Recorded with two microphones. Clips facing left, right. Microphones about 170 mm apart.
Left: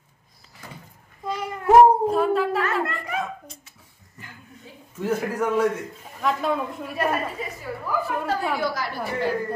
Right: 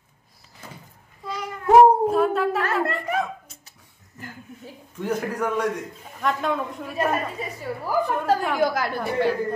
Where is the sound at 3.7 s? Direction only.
45° right (ahead or behind).